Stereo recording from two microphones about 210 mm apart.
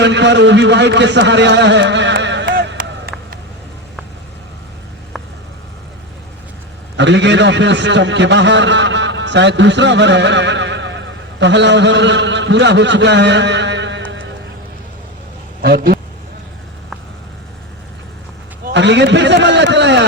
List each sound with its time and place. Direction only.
0.0 s a man's voice: 55° right (ahead or behind)
2.5 s a sound: 45° right (ahead or behind)
3.1 s a sound: centre (ahead or behind)
6.9 s a man's voice: 55° right (ahead or behind)
15.6 s speech: 45° right (ahead or behind)
18.7 s a man's voice: 55° right (ahead or behind)